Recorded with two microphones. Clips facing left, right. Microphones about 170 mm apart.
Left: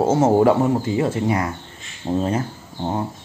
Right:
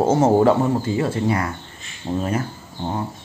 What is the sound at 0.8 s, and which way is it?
Speech, 20° left (ahead or behind).